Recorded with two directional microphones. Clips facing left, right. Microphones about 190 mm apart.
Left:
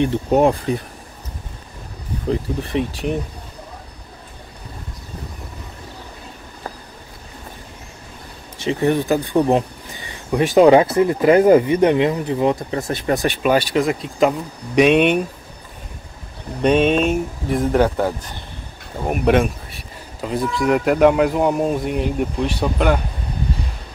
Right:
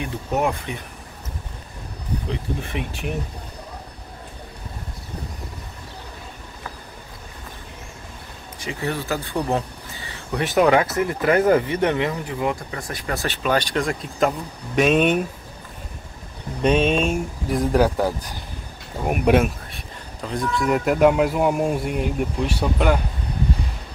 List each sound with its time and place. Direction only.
0.0 s speech: 30° left (ahead or behind)
2.2 s speech: 35° left (ahead or behind)
8.5 s speech: 20° left (ahead or behind); by 15.1 s centre (ahead or behind)
16.6 s speech: 5° left (ahead or behind)
20.2 s speech: 5° left (ahead or behind)